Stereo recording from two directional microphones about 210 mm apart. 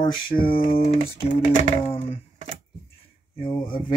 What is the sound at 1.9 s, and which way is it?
Speech, 30° left (ahead or behind).